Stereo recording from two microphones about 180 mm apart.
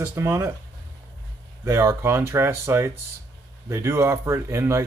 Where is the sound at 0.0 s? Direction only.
15° right (ahead or behind).